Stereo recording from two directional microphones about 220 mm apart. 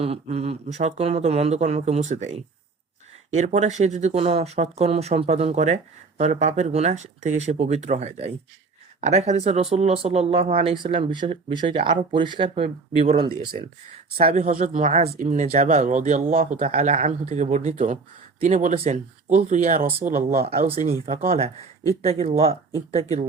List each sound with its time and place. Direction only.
0.0 s speech: 30° right (ahead or behind)
20.5 s speech: 25° right (ahead or behind)